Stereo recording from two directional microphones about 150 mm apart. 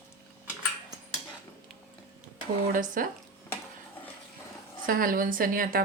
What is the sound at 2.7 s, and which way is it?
Speech, 65° right (ahead or behind).